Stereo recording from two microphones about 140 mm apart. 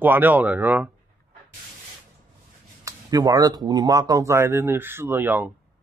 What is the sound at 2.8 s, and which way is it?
Speech, 25° right (ahead or behind).